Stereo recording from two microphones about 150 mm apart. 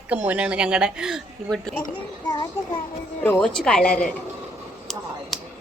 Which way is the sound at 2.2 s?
25° left (ahead or behind).